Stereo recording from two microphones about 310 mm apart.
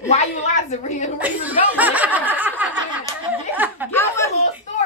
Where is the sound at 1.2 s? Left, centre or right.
Centre.